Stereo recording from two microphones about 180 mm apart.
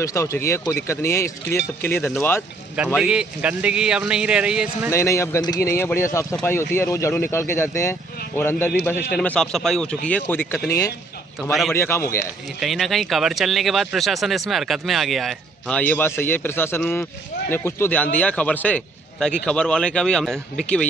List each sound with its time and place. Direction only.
0.0 s speech: 15° left (ahead or behind)
3.0 s speech: 5° right (ahead or behind)
4.9 s speech: 15° left (ahead or behind)
11.7 s speech: 15° left (ahead or behind)
12.5 s speech: centre (ahead or behind)